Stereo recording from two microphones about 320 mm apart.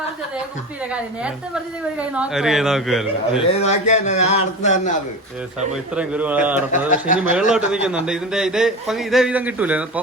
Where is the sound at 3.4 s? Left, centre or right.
Centre.